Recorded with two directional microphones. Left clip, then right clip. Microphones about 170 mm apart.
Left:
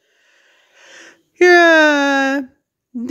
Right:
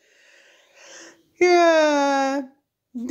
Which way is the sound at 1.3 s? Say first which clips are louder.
Left 7 dB; 90° left.